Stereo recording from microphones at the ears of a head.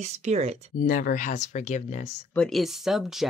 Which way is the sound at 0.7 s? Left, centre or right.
Left.